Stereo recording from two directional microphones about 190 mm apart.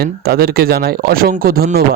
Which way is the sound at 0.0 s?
55° right (ahead or behind).